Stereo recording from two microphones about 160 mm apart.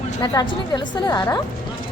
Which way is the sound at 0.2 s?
25° left (ahead or behind).